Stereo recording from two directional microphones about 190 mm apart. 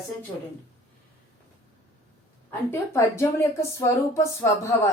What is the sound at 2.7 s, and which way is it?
Speech, 15° left (ahead or behind).